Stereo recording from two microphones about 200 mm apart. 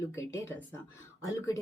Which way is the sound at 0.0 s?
15° left (ahead or behind).